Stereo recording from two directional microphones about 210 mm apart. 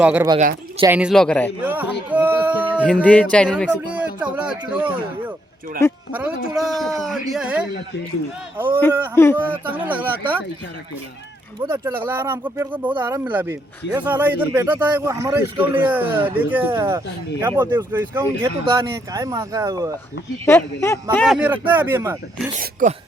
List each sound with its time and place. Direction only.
0.0 s speech: 5° right (ahead or behind)
1.6 s speech: 10° right (ahead or behind)
2.8 s speech: 5° left (ahead or behind)
3.9 s a sound: 5° right (ahead or behind)
6.1 s speech: 5° right (ahead or behind)
11.6 s speech: 15° right (ahead or behind)
20.4 s speech: 10° left (ahead or behind); by 22.2 s 10° right (ahead or behind)
22.6 s speech: 35° right (ahead or behind)